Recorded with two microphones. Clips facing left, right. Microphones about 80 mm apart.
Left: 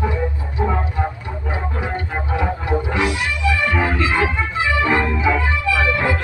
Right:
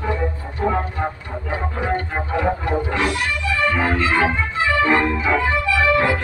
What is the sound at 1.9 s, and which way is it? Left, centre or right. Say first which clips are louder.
Music: right 2 dB; right.